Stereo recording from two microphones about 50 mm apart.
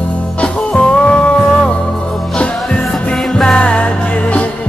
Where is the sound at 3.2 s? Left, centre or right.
Centre.